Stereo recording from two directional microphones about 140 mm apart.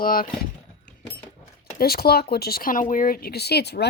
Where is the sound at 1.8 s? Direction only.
90° left.